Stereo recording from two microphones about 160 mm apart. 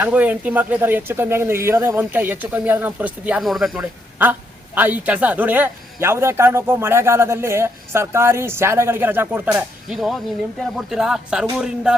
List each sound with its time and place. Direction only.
0.0 s a man's voice: 10° right (ahead or behind)
4.2 s a man's voice: 10° right (ahead or behind)
9.9 s speech: centre (ahead or behind)